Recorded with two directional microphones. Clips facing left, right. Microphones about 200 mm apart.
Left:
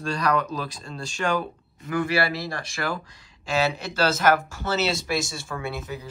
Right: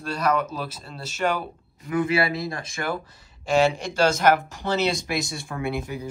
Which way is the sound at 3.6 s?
15° right (ahead or behind).